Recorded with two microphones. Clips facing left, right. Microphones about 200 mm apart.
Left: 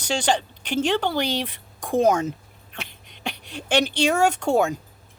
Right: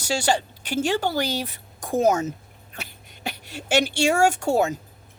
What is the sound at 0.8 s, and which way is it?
Speech, 45° right (ahead or behind).